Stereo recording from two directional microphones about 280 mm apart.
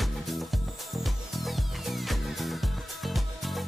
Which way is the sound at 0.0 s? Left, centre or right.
Centre.